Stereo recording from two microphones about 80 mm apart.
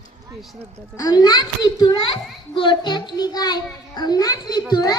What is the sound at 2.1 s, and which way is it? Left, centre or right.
A child's voice, left.